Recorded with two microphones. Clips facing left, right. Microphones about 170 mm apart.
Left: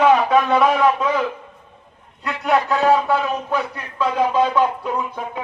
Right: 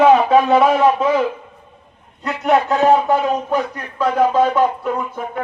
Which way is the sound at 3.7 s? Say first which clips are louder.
Right 3 dB; 50° right (ahead or behind).